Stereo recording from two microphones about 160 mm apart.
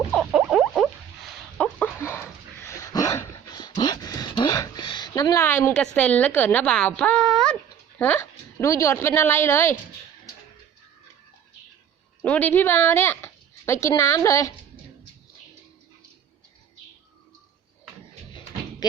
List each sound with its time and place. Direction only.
0.1 s rodents: centre (ahead or behind)
1.5 s dog: 10° left (ahead or behind)
7.9 s a woman's voice: 10° left (ahead or behind)
12.2 s speech: 10° left (ahead or behind)